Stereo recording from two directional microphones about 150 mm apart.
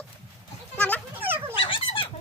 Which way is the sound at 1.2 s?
15° right (ahead or behind).